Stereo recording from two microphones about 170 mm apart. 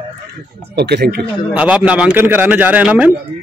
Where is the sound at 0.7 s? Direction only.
75° right (ahead or behind).